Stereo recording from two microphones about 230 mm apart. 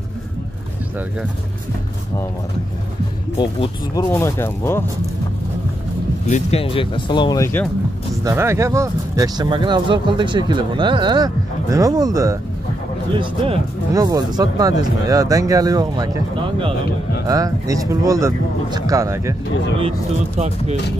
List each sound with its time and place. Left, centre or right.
3.3 s speech: centre
6.2 s speech: left; by 7.7 s centre
8.2 s speech: centre
20.3 s speech: right